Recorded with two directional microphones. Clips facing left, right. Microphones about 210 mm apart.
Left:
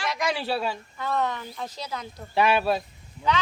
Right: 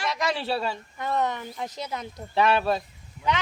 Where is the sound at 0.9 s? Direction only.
20° right (ahead or behind).